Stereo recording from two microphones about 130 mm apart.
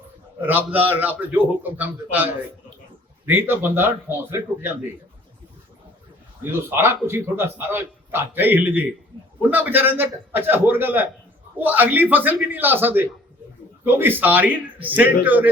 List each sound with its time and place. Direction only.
0.4 s a man's voice: 15° right (ahead or behind)
6.4 s a man's voice: 20° right (ahead or behind)